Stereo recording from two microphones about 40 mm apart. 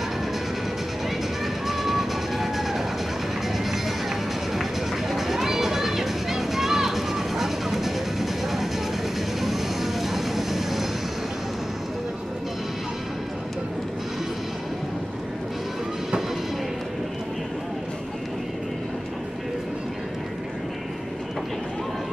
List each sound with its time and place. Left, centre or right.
1.4 s music: centre
4.6 s a sound: centre
9.4 s vehicle: centre